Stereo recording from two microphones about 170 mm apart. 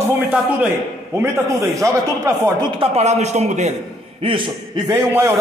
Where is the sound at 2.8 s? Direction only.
40° right (ahead or behind).